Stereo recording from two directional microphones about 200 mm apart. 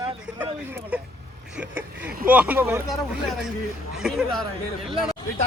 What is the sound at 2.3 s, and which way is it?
Speech, 10° right (ahead or behind).